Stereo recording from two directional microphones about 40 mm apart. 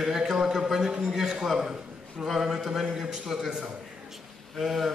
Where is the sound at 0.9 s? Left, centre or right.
Right.